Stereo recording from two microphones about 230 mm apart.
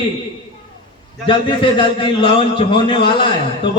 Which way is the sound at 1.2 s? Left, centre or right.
Left.